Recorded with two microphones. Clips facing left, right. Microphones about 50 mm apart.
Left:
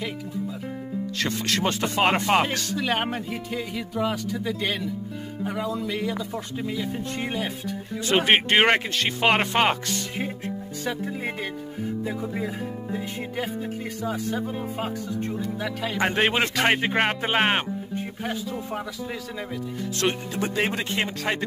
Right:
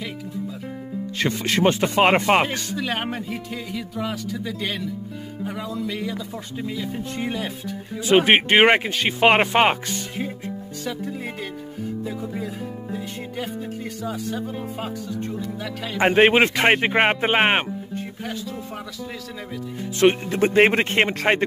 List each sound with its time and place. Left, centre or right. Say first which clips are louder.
1.4 s speech: right 7 dB; right
2.8 s speech: left 1 dB; centre
8.1 s speech: right 4 dB; centre
10.9 s speech: even; centre
14.0 s speech: left 1 dB; centre
16.0 s speech: right 7 dB; right
17.9 s music: left 2 dB; centre
20.0 s speech: right 9 dB; right
20.3 s speech: right 9 dB; right